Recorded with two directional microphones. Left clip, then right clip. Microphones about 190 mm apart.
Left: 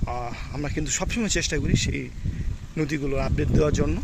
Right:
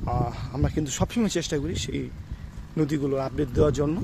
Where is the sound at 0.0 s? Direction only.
20° right (ahead or behind).